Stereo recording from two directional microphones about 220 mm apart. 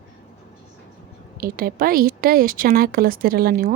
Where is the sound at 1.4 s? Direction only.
40° right (ahead or behind).